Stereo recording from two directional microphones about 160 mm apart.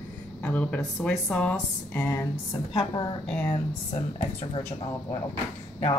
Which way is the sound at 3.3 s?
10° left (ahead or behind).